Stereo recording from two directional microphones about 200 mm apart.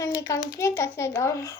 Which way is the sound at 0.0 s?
15° left (ahead or behind).